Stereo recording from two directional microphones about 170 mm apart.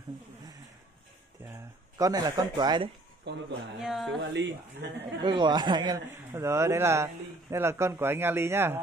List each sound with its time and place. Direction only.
2.0 s speech: 20° right (ahead or behind)
3.3 s speech: 90° right
3.8 s speech: centre (ahead or behind)
4.3 s speech: 90° right
5.2 s speech: 25° right (ahead or behind)